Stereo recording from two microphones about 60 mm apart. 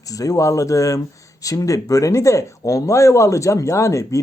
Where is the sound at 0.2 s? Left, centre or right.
Left.